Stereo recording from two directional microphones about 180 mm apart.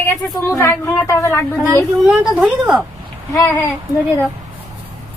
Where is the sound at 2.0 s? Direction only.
5° right (ahead or behind).